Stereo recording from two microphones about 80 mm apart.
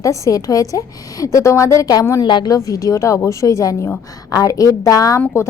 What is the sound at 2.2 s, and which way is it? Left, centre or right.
Speech, left.